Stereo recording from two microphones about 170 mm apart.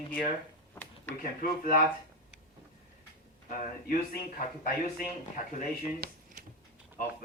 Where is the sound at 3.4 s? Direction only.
55° left (ahead or behind).